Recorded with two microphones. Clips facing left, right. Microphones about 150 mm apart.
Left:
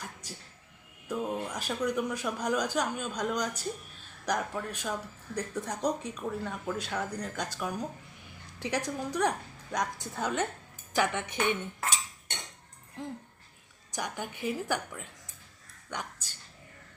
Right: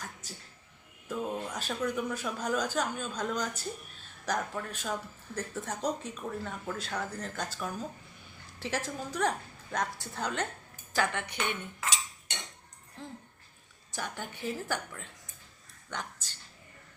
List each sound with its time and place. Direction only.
0.0 s a woman's voice: 10° left (ahead or behind)
11.3 s cutlery: 55° left (ahead or behind)
13.9 s speech: 15° left (ahead or behind)